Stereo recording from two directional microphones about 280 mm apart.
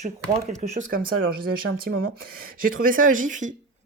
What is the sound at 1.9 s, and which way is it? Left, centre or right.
Speech, right.